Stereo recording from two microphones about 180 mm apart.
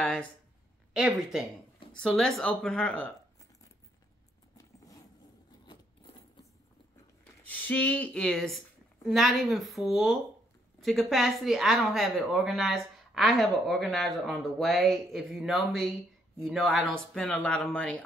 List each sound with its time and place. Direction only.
0.9 s speech: 5° right (ahead or behind)
4.6 s zipper: 20° left (ahead or behind)
7.4 s a woman's voice: 10° left (ahead or behind)